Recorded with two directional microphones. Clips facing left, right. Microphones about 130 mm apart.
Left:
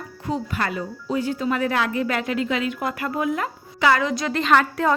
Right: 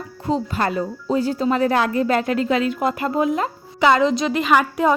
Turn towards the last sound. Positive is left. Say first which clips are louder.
# right 2 dB
turn(degrees=-15)  # may be behind; listen again after turning